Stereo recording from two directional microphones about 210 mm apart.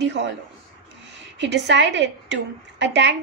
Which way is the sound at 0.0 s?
55° right (ahead or behind).